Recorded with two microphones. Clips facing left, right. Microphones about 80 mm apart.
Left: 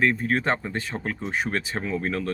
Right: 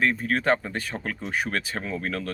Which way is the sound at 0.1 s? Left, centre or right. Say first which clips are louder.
Right 1 dB; left.